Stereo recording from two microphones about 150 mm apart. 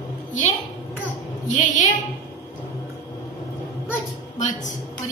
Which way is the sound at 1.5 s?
60° left (ahead or behind).